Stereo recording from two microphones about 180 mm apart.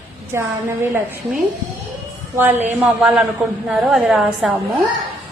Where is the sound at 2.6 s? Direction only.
10° right (ahead or behind).